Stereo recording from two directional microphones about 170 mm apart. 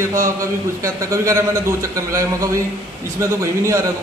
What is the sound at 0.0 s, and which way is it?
A man's voice, 15° right (ahead or behind).